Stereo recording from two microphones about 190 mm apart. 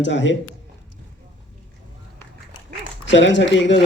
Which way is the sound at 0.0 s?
70° left (ahead or behind).